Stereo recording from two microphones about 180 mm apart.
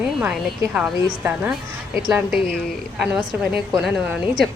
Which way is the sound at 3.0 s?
5° right (ahead or behind).